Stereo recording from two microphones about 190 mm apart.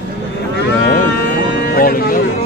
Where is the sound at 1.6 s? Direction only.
50° left (ahead or behind).